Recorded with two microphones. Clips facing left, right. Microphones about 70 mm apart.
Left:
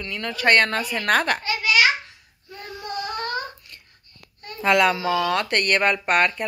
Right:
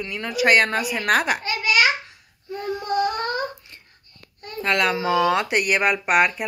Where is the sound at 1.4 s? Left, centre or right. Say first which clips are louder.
Even; right.